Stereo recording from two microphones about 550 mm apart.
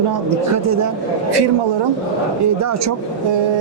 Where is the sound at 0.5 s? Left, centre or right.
Right.